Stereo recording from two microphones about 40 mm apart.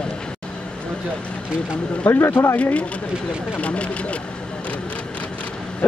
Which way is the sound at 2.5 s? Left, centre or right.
Left.